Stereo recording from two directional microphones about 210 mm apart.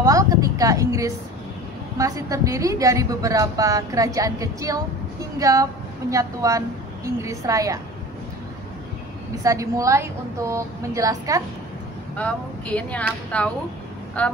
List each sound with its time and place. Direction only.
0.0 s a woman's voice: 15° right (ahead or behind)
9.4 s a woman's voice: 15° right (ahead or behind)
12.2 s speech: 5° left (ahead or behind)